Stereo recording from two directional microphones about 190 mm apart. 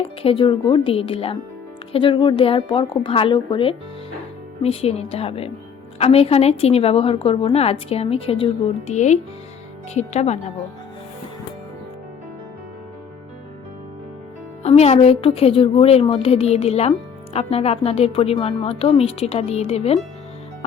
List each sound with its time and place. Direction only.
0.2 s a woman's voice: 30° left (ahead or behind)
14.6 s a woman's voice: 35° left (ahead or behind)